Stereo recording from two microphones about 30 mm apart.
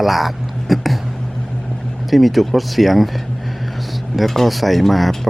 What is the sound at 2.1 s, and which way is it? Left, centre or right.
Speech, centre.